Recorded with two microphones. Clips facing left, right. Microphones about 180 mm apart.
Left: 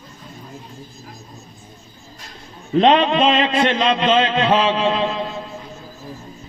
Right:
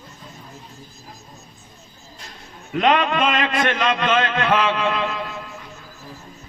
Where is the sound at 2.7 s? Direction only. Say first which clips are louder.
Left 5 dB; 30° left (ahead or behind).